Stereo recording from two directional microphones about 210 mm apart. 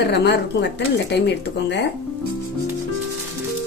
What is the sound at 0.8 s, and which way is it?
Speech, 55° left (ahead or behind).